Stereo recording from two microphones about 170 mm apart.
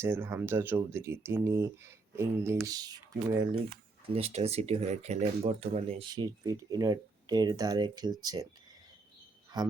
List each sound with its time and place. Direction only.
0.0 s speech: 15° right (ahead or behind)
4.0 s speech: 35° right (ahead or behind)
6.1 s speech: 25° right (ahead or behind)
9.5 s speech: 25° right (ahead or behind)